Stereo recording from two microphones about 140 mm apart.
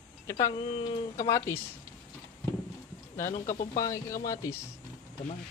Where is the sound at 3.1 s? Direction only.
65° left (ahead or behind).